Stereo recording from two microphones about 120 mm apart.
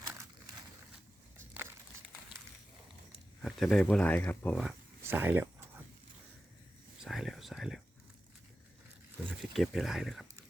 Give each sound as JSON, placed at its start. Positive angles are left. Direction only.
{"t": 0.0, "sound": "crumpling", "side_deg": -25}
{"t": 3.4, "sound": "speech", "side_deg": 0}
{"t": 5.0, "sound": "a sound", "side_deg": -15}
{"t": 7.0, "sound": "whispering", "side_deg": 0}
{"t": 9.4, "sound": "speech", "side_deg": 0}